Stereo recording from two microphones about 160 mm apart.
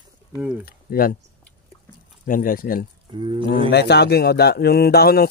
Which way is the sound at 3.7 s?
90° left.